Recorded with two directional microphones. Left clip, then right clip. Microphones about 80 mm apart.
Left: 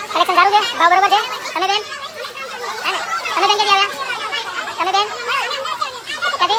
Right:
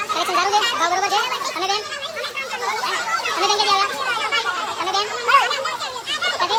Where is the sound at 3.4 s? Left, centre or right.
Left.